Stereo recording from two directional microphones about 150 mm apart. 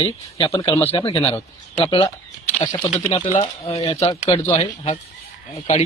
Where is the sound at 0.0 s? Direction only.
40° left (ahead or behind).